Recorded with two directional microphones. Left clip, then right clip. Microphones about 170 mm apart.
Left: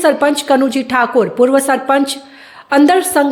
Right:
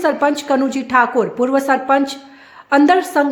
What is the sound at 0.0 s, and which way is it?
A woman's voice, 15° left (ahead or behind).